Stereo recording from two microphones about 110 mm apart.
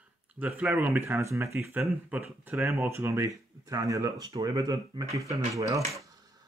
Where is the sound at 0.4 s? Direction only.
15° right (ahead or behind).